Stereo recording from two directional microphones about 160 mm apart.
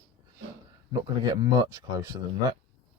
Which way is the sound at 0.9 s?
25° right (ahead or behind).